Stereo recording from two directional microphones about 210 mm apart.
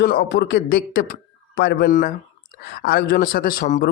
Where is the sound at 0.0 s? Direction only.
45° left (ahead or behind).